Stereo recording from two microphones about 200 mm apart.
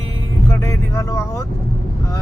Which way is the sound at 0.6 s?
15° left (ahead or behind).